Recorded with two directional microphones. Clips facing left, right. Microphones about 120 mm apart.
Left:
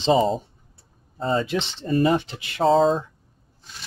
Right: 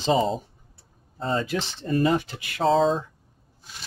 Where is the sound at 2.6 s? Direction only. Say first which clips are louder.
Left 3 dB; centre (ahead or behind).